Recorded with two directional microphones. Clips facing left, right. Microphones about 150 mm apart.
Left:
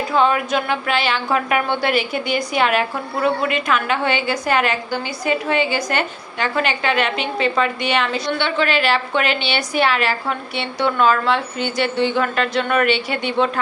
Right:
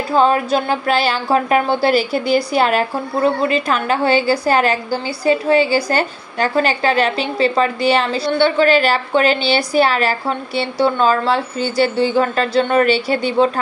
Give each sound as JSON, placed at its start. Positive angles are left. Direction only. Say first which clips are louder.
{"t": 0.1, "sound": "speech", "louder": "right 4 dB", "side_deg": -35}